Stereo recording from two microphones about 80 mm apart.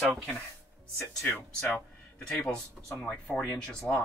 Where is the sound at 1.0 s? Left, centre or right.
Left.